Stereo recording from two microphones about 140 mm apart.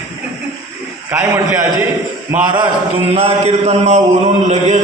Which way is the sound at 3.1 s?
45° right (ahead or behind).